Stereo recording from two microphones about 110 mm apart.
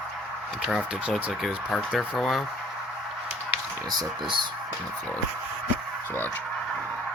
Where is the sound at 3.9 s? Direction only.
40° right (ahead or behind).